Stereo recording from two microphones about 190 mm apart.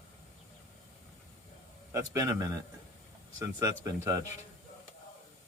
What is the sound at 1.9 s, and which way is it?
Speech, 15° right (ahead or behind).